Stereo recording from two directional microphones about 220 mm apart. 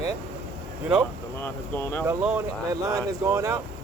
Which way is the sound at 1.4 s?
10° left (ahead or behind).